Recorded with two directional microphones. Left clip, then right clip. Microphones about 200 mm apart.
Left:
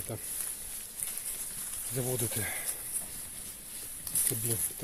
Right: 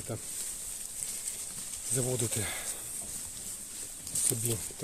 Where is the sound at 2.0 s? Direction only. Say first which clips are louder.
Right 1 dB; 20° right (ahead or behind).